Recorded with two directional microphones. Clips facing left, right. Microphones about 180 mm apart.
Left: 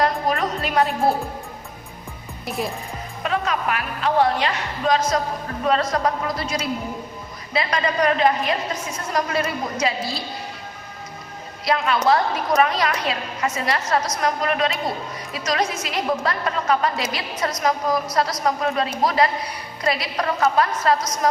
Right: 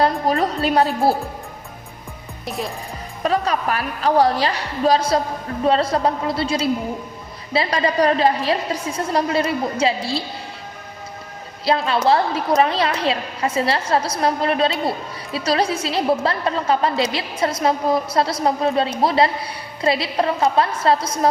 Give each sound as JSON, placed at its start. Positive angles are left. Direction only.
{"t": 0.0, "sound": "a woman's voice", "side_deg": -30}
{"t": 3.2, "sound": "a woman's voice", "side_deg": -35}
{"t": 11.6, "sound": "a woman's voice", "side_deg": -30}